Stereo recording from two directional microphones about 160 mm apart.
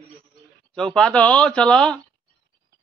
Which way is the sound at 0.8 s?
5° left (ahead or behind).